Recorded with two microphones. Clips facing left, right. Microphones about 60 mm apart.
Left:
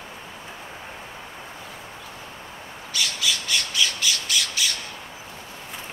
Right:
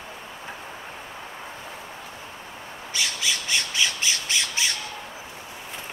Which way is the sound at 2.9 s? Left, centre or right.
Right.